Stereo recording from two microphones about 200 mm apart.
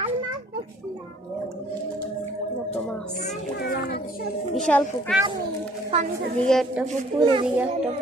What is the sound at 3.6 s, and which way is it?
Children playing, 50° left (ahead or behind).